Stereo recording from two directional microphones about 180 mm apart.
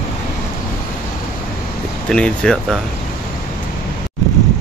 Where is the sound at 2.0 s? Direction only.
5° left (ahead or behind).